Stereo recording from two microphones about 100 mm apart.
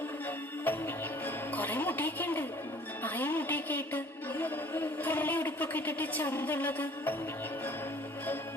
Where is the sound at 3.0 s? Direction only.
20° left (ahead or behind).